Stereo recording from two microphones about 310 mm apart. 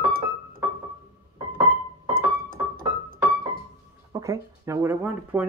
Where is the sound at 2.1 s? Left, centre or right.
Right.